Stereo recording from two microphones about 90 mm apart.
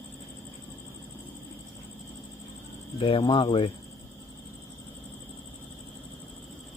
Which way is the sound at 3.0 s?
65° left (ahead or behind).